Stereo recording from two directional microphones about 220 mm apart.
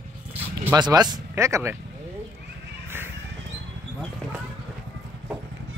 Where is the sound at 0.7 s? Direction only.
20° right (ahead or behind).